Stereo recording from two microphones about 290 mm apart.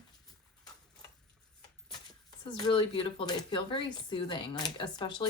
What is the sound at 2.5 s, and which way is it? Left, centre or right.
Speech, centre.